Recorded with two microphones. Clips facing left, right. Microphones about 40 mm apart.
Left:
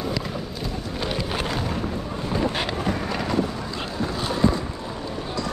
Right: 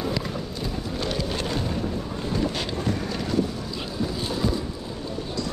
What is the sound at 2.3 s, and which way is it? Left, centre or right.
Boat, centre.